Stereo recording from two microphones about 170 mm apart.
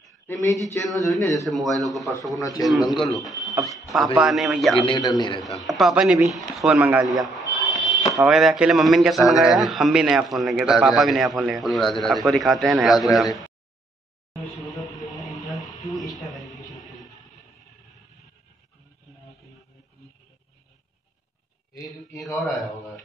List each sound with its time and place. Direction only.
0.8 s a man's voice: centre (ahead or behind)
2.3 s a man's voice: 20° left (ahead or behind)
2.6 s a man's voice: centre (ahead or behind)
4.7 s a man's voice: 30° left (ahead or behind)
5.6 s a man's voice: centre (ahead or behind)
7.5 s a sound: centre (ahead or behind)
8.1 s a man's voice: centre (ahead or behind)
14.7 s music: centre (ahead or behind)
15.2 s a sound: 20° left (ahead or behind)
22.2 s a man's voice: centre (ahead or behind)